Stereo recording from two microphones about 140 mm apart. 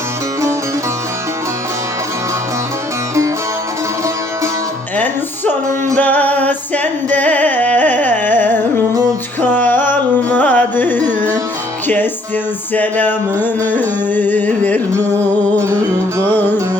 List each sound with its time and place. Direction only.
6.0 s music: 10° left (ahead or behind)
10.3 s carnatic music: 10° left (ahead or behind)
12.7 s carnatic music: 10° left (ahead or behind)
15.1 s music: 20° right (ahead or behind)
16.3 s music: 15° left (ahead or behind)